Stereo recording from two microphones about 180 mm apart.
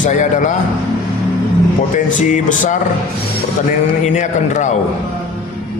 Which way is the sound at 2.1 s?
45° left (ahead or behind).